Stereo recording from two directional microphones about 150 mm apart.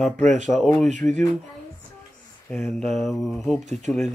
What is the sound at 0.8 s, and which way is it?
Speech, 55° right (ahead or behind).